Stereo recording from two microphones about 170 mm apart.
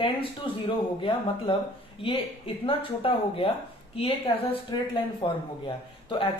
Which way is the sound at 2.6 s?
35° left (ahead or behind).